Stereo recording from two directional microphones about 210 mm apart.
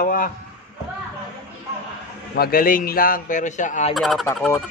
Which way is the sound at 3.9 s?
Centre (ahead or behind).